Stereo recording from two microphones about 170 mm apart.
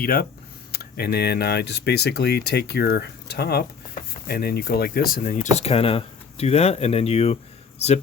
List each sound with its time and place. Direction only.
0.0 s speech: 60° left (ahead or behind); by 7.9 s 40° left (ahead or behind)